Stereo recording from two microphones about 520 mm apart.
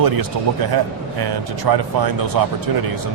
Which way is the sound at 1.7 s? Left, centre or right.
Right.